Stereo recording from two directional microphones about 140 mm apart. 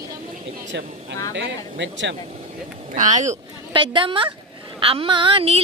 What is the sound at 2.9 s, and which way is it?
Speech, 65° right (ahead or behind).